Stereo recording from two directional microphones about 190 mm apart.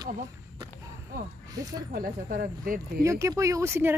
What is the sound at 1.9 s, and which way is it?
Speech, 50° right (ahead or behind).